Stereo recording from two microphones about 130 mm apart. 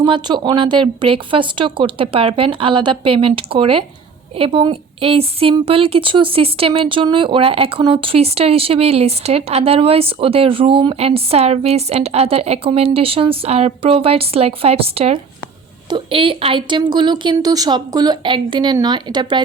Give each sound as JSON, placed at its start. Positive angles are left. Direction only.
{"t": 0.0, "sound": "a woman's voice", "side_deg": -35}